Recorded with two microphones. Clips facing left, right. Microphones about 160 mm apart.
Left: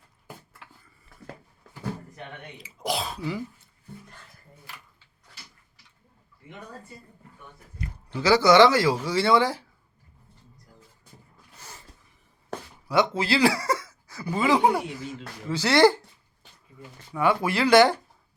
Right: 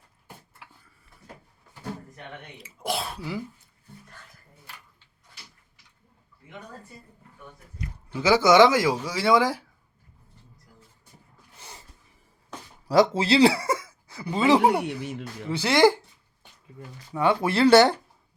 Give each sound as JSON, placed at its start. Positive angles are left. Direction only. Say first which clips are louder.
{"t": 0.6, "sound": "a sound", "louder": "even", "side_deg": -5}
{"t": 2.6, "sound": "speech", "louder": "left 1 dB", "side_deg": 0}
{"t": 8.1, "sound": "speech", "louder": "even", "side_deg": -15}
{"t": 12.9, "sound": "speech", "louder": "right 4 dB", "side_deg": -35}
{"t": 13.2, "sound": "speech", "louder": "right 3 dB", "side_deg": -25}
{"t": 14.8, "sound": "speech", "louder": "right 3 dB", "side_deg": -70}
{"t": 15.4, "sound": "speech", "louder": "even", "side_deg": -15}
{"t": 17.2, "sound": "speech", "louder": "right 2 dB", "side_deg": -25}